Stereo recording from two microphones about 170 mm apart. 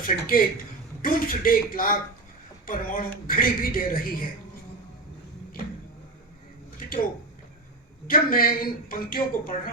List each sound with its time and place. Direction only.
0.1 s a man's voice: 55° left (ahead or behind)
8.0 s a man's voice: 60° left (ahead or behind)